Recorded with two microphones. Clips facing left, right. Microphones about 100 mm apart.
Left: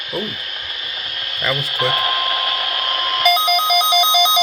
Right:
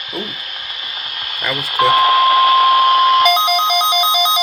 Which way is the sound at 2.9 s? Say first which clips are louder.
Right 7 dB; 10° right (ahead or behind).